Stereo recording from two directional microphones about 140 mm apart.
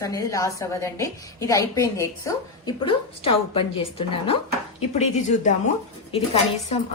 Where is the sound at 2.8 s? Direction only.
40° left (ahead or behind).